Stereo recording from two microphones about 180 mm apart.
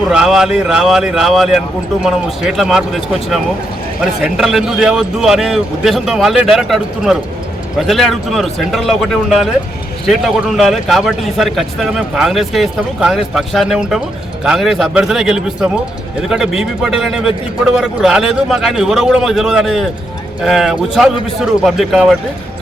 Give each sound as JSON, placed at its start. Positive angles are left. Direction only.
{"t": 0.1, "sound": "speech", "side_deg": -5}